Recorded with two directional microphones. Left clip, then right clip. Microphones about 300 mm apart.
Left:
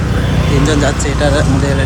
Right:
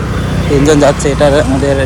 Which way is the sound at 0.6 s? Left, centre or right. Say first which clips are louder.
Right 9 dB; centre.